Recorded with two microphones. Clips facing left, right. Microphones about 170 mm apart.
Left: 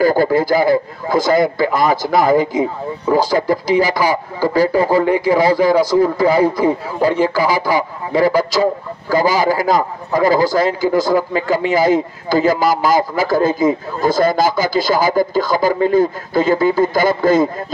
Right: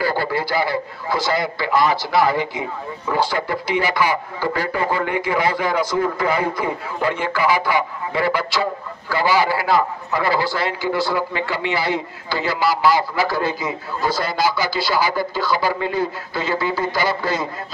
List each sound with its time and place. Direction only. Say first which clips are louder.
0.0 s a man's voice: left 8 dB; 45° left (ahead or behind)